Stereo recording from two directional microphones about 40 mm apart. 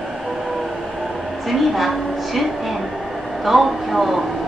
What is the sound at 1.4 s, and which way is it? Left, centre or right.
A woman's voice, centre.